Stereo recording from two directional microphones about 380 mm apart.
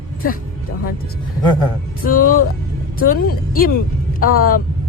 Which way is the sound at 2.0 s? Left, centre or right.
Left.